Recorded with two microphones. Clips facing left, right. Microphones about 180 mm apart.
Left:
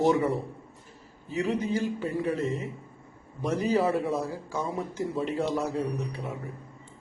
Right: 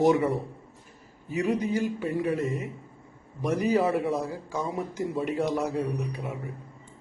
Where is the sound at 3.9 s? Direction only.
Centre (ahead or behind).